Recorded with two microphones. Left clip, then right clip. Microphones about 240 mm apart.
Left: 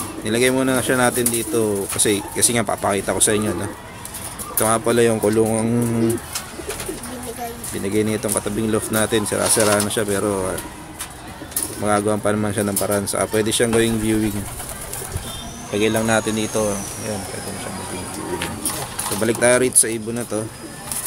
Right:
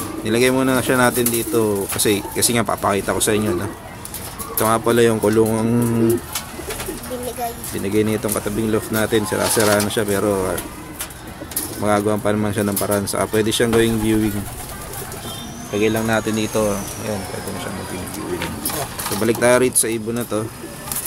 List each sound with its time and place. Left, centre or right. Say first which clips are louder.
0.2 s speech: right 1 dB; centre
4.6 s speech: right 1 dB; centre
7.8 s speech: right 2 dB; centre
11.8 s speech: right 1 dB; centre
15.7 s speech: even; centre
19.1 s speech: right 1 dB; centre